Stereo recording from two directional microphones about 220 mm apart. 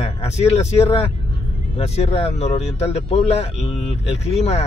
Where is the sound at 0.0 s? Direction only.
30° left (ahead or behind).